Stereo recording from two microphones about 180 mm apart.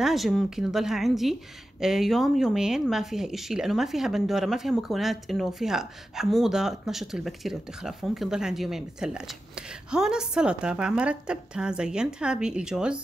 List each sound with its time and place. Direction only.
0.0 s speech: centre (ahead or behind)